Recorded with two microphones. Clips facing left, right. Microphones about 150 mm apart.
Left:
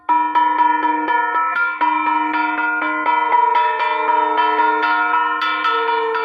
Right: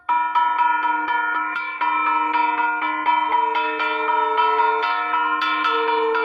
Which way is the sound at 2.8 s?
45° left (ahead or behind).